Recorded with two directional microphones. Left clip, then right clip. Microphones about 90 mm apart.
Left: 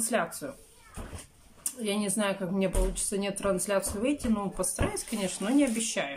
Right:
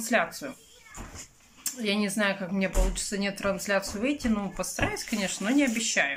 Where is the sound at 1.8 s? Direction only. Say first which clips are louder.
Right 3 dB; 25° left (ahead or behind).